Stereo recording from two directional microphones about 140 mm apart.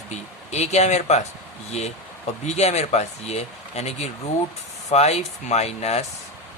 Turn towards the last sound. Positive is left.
turn(degrees=50)  # may be behind; listen again after turning